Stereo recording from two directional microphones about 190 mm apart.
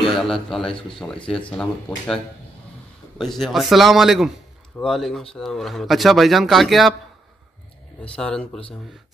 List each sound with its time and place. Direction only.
0.0 s speech: centre (ahead or behind)
3.2 s speech: centre (ahead or behind)
8.0 s speech: 5° left (ahead or behind)